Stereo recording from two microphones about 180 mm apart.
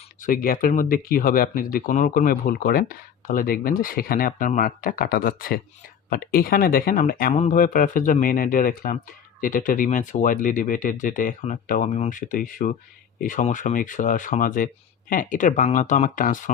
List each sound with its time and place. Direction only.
0.2 s speech: 55° left (ahead or behind)